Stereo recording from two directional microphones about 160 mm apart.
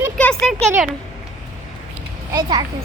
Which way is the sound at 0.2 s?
5° left (ahead or behind).